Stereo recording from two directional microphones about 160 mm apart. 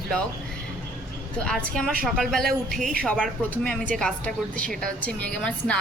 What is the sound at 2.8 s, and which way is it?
Speech, 55° right (ahead or behind).